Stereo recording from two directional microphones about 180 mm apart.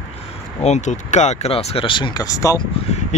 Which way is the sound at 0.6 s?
40° left (ahead or behind).